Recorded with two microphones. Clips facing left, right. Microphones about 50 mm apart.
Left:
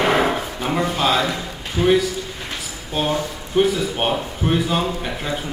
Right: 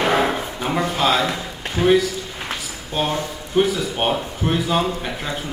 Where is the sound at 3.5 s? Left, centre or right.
Centre.